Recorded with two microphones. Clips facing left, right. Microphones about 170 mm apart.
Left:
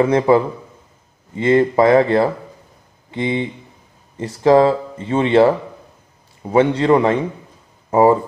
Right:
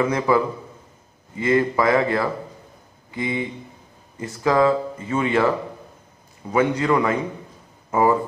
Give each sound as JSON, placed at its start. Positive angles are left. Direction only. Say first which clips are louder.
{"t": 0.0, "sound": "speech", "louder": "left 6 dB", "side_deg": 30}
{"t": 6.5, "sound": "speech", "louder": "left 6 dB", "side_deg": 30}